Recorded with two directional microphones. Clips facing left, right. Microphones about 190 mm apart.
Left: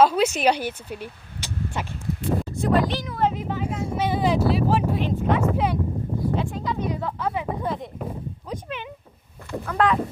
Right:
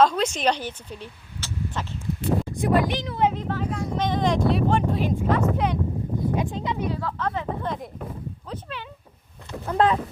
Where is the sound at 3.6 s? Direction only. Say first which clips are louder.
Left 1 dB; 25° left (ahead or behind).